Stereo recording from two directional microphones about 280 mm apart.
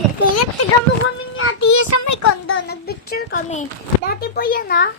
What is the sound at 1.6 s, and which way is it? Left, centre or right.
Child singing, left.